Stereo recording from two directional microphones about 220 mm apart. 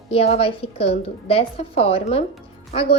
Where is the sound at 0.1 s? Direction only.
25° left (ahead or behind).